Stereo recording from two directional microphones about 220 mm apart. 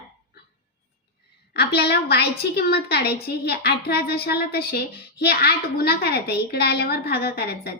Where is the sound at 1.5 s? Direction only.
50° left (ahead or behind).